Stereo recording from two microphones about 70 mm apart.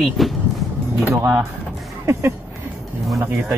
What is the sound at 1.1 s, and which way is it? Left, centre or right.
Speech, right.